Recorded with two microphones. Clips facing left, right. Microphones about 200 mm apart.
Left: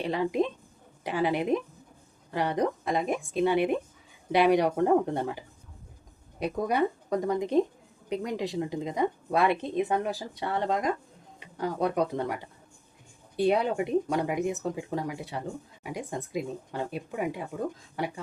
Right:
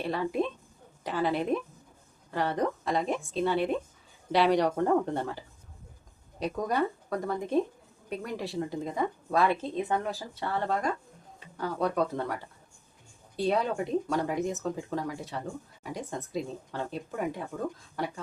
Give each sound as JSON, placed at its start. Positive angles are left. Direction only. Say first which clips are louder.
{"t": 0.0, "sound": "speech", "louder": "left 2 dB", "side_deg": 15}
{"t": 6.4, "sound": "speech", "louder": "left 2 dB", "side_deg": 10}